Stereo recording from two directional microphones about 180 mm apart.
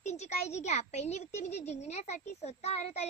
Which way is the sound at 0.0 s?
40° left (ahead or behind).